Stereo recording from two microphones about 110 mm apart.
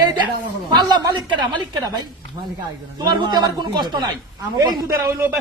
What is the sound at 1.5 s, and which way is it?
A man's voice, 40° right (ahead or behind).